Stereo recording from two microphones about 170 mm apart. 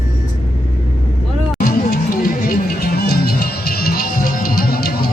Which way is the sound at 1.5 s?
60° left (ahead or behind).